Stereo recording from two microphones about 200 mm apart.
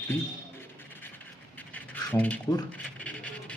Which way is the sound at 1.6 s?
10° left (ahead or behind).